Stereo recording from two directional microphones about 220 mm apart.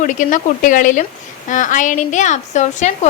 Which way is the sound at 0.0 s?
35° left (ahead or behind).